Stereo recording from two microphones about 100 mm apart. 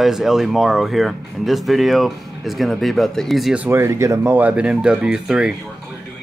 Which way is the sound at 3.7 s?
25° right (ahead or behind).